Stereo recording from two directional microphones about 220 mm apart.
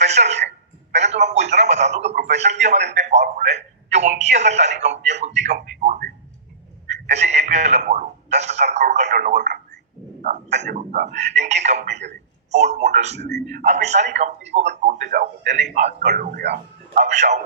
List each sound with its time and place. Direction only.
0.0 s a man's voice: 30° right (ahead or behind)
10.2 s a man's voice: 30° right (ahead or behind)
13.1 s a man's voice: 50° right (ahead or behind)
13.7 s a man's voice: 30° right (ahead or behind)
16.0 s speech: 50° right (ahead or behind)
17.0 s a man's voice: 30° right (ahead or behind)